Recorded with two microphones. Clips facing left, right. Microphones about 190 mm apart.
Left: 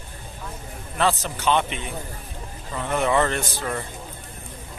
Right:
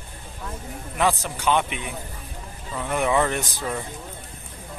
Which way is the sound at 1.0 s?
15° right (ahead or behind).